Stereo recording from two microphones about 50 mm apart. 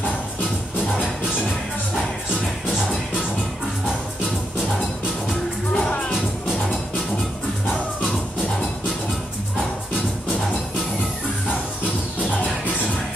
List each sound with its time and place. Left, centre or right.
5.8 s music: left